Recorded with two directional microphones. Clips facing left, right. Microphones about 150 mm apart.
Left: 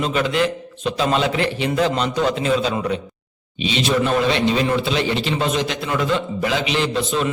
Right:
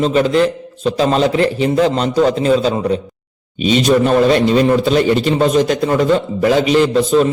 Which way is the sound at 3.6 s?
45° right (ahead or behind).